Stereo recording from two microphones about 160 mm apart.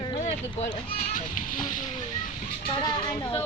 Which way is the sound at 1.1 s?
55° left (ahead or behind).